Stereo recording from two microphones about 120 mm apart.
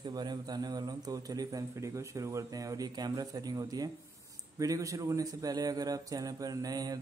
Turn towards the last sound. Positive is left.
turn(degrees=-30)  # may be behind; listen again after turning